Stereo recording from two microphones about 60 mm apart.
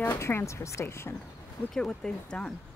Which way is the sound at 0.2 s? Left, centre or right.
Left.